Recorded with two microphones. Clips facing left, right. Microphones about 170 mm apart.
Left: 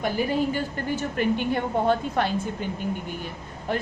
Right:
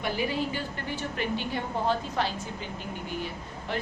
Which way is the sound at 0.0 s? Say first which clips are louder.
Left 5 dB; 45° left (ahead or behind).